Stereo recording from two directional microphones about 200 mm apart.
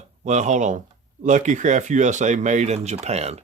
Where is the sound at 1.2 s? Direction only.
40° right (ahead or behind).